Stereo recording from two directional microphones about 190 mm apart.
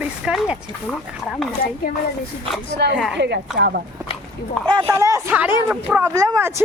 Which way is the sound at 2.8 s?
60° right (ahead or behind).